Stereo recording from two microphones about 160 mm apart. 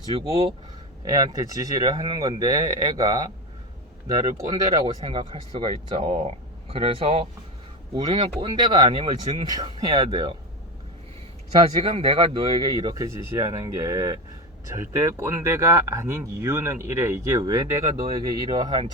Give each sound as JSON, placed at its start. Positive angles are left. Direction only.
{"t": 0.2, "sound": "speech", "side_deg": -35}
{"t": 1.0, "sound": "speech", "side_deg": -25}
{"t": 5.0, "sound": "speech", "side_deg": -35}
{"t": 11.8, "sound": "speech", "side_deg": -30}